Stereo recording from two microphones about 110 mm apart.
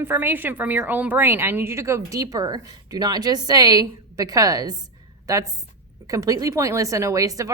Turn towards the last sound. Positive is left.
turn(degrees=-30)  # may be behind; listen again after turning